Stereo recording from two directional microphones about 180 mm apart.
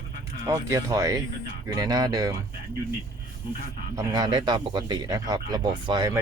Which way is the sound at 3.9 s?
20° right (ahead or behind).